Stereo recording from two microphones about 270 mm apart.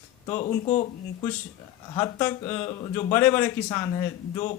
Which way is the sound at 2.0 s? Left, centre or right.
Centre.